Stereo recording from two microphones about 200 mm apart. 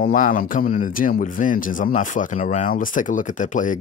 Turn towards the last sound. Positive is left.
turn(degrees=40)  # may be behind; listen again after turning